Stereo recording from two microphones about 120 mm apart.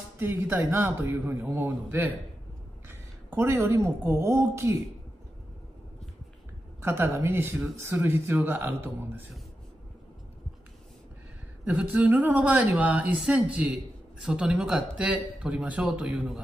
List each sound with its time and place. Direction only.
0.2 s a woman's voice: 20° right (ahead or behind)
6.8 s speech: 20° right (ahead or behind)
11.6 s speech: 10° right (ahead or behind)